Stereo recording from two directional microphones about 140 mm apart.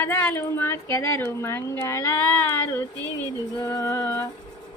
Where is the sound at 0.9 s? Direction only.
15° left (ahead or behind).